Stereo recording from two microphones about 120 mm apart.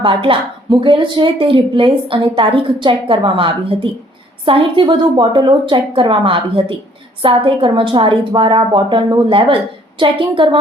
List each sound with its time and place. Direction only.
0.0 s a woman's voice: 45° right (ahead or behind)